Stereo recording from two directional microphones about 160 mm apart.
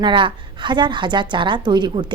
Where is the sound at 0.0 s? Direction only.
30° right (ahead or behind).